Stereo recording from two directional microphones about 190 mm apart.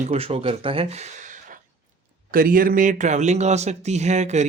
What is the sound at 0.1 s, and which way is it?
Speech, 30° right (ahead or behind).